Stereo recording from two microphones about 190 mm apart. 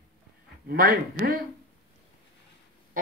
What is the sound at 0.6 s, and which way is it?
Speech, 50° right (ahead or behind).